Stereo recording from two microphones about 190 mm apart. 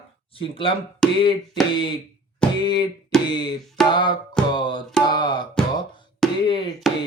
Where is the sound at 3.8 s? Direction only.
5° left (ahead or behind).